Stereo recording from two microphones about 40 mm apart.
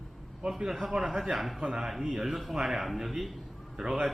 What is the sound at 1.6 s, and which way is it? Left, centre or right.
Speech, centre.